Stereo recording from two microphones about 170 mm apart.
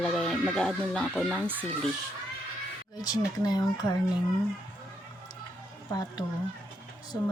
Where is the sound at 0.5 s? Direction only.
5° left (ahead or behind).